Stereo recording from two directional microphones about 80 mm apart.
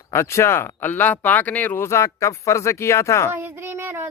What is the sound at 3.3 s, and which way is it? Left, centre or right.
Speech, right.